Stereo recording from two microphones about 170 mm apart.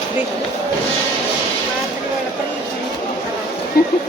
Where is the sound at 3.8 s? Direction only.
65° left (ahead or behind).